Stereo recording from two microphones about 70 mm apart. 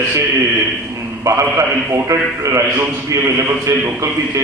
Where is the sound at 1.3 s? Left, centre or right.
Right.